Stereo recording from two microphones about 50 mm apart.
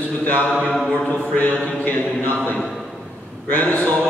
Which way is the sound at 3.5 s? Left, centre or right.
Left.